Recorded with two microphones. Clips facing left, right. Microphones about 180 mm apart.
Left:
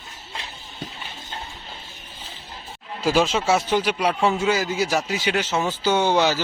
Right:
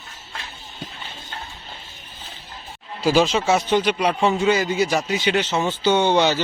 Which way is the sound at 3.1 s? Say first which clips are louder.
Right 2 dB; centre (ahead or behind).